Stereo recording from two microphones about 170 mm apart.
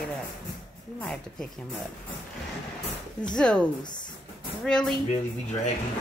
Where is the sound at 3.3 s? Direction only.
5° left (ahead or behind).